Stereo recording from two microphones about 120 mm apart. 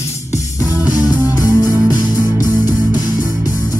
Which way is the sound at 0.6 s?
15° right (ahead or behind).